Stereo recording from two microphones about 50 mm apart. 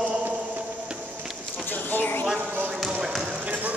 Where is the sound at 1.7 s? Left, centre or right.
Left.